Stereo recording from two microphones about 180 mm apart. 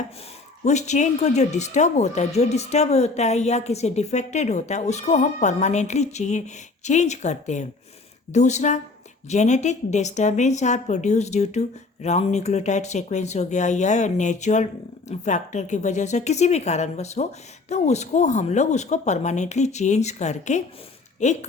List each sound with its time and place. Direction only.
0.6 s speech: 40° left (ahead or behind)